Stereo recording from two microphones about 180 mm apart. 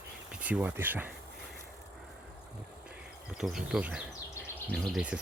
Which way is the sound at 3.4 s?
5° right (ahead or behind).